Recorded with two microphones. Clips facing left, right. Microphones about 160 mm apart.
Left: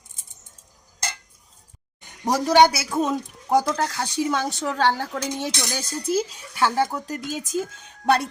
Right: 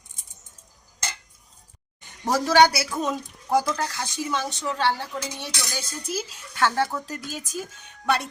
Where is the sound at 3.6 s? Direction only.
40° left (ahead or behind).